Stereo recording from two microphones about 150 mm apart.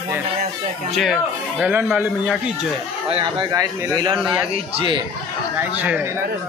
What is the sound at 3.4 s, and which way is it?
Speech, 20° right (ahead or behind).